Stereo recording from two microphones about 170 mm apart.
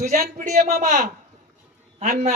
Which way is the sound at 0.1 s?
60° right (ahead or behind).